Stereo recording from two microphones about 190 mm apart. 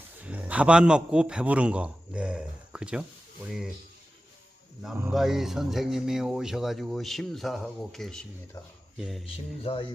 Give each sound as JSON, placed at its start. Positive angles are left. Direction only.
{"t": 0.2, "sound": "a man's voice", "side_deg": -10}
{"t": 5.1, "sound": "speech", "side_deg": 0}
{"t": 9.2, "sound": "music", "side_deg": 30}